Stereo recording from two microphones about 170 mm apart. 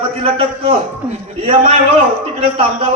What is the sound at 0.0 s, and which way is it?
Speech, 35° right (ahead or behind).